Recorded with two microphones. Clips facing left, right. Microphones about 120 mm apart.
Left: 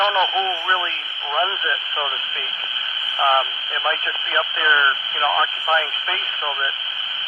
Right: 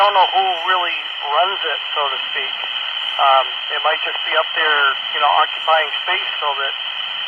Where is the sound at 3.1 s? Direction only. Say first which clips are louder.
Right 5 dB; 35° right (ahead or behind).